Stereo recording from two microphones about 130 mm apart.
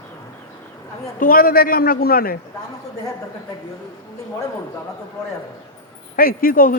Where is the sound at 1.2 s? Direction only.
90° left.